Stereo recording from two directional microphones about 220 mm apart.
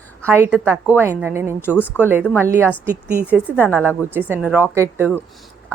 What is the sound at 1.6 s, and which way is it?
Speech, 10° left (ahead or behind).